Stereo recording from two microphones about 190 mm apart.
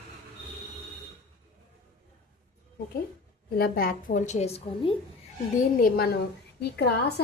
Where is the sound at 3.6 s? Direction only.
55° left (ahead or behind); by 4.9 s 35° left (ahead or behind).